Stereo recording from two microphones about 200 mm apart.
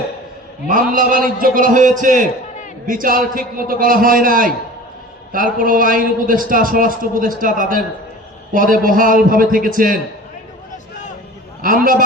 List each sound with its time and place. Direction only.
0.7 s a man's voice: 40° right (ahead or behind)
11.6 s a man's voice: 45° right (ahead or behind)